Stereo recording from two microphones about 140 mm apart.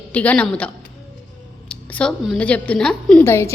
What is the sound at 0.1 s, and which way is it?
Speech, 10° left (ahead or behind).